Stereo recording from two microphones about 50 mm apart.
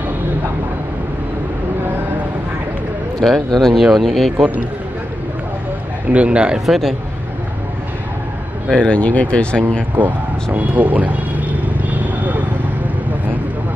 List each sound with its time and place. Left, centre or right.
3.2 s a man's voice: centre
6.1 s speech: right
6.6 s a man's voice: centre
8.7 s speech: left
9.9 s vehicle: right